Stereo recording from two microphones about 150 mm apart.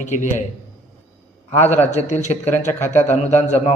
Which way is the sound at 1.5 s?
50° left (ahead or behind).